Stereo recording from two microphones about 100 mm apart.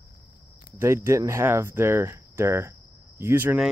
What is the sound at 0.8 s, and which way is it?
Speech, 25° right (ahead or behind).